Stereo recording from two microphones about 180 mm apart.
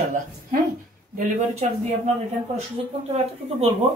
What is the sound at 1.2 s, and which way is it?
Speech, 35° right (ahead or behind).